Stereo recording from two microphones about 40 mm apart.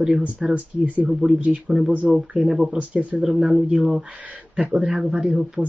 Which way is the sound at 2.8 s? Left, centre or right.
Right.